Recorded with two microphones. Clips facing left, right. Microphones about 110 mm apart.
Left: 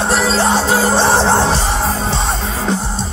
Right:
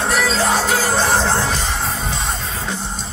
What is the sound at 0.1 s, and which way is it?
Music, 30° left (ahead or behind).